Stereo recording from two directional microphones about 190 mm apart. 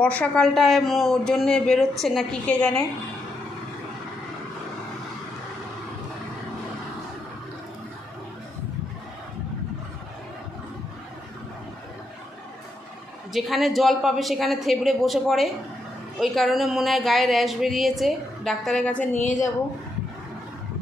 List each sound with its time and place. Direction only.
0.0 s speech: 5° left (ahead or behind)
13.3 s speech: centre (ahead or behind)
19.1 s a woman's voice: 40° left (ahead or behind)